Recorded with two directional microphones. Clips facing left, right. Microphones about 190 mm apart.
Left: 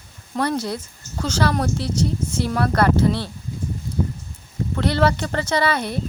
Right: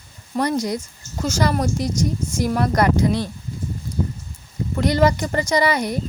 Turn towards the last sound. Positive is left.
turn(degrees=-15)  # may be behind; listen again after turning